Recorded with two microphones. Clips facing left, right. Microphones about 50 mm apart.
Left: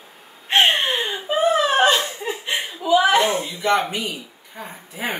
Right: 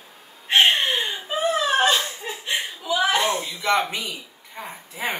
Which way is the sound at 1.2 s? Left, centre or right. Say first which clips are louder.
Left 5 dB; left.